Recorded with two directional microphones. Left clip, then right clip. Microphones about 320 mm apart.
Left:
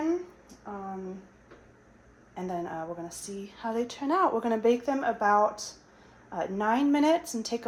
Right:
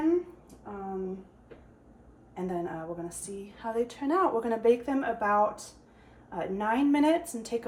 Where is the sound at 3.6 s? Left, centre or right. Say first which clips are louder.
Even; left.